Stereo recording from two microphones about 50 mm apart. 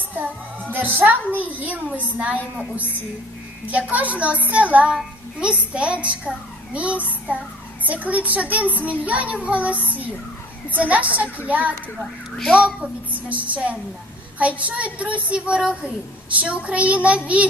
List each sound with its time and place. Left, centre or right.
0.1 s a child's voice: right
12.5 s speech: centre
13.1 s a child's voice: right